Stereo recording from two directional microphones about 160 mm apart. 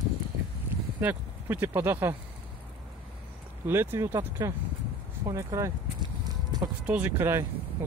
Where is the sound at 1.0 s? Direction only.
10° right (ahead or behind).